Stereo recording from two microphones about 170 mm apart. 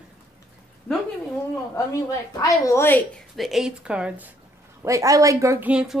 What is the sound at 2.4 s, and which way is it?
Speech, 20° left (ahead or behind).